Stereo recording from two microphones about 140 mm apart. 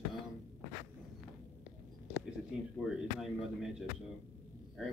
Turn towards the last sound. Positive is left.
turn(degrees=0)  # may be behind; listen again after turning